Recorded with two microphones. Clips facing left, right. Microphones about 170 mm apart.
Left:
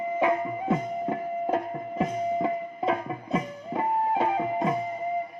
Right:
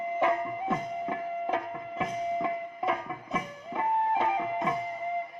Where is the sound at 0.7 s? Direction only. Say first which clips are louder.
Left 6 dB; 35° left (ahead or behind).